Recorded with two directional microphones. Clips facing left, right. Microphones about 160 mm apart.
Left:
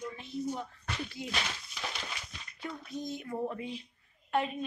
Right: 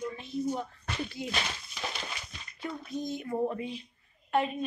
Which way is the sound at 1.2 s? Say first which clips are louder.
Right 2 dB; 20° right (ahead or behind).